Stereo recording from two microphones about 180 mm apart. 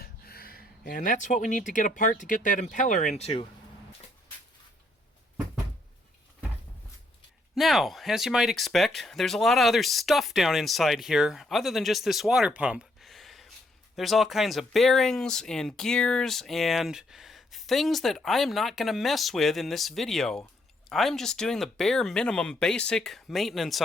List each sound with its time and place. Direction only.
0.0 s speech: 55° left (ahead or behind); by 3.4 s 35° left (ahead or behind)
7.5 s speech: centre (ahead or behind)